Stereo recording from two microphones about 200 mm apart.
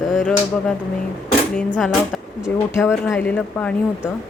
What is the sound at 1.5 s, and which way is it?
Speech, 5° left (ahead or behind).